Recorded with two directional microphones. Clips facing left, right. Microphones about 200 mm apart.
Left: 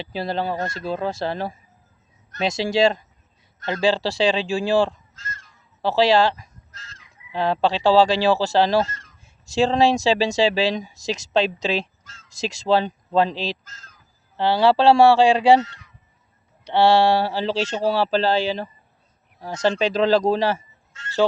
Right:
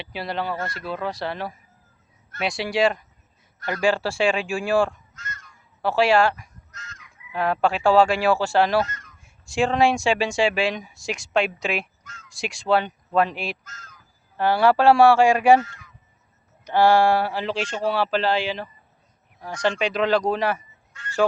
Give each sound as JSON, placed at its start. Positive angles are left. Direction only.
{"t": 0.0, "sound": "speech", "side_deg": 30}
{"t": 4.9, "sound": "honk", "side_deg": 30}
{"t": 9.6, "sound": "speech", "side_deg": 35}
{"t": 20.9, "sound": "fowl", "side_deg": 25}